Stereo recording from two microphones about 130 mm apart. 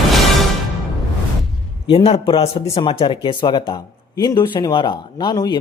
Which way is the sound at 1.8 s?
45° left (ahead or behind).